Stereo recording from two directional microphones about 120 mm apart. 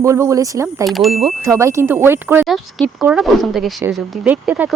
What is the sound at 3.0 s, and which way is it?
A woman's voice, 5° right (ahead or behind).